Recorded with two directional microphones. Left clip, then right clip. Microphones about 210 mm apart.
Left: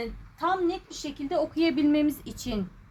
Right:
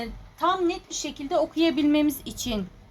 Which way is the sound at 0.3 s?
Centre (ahead or behind).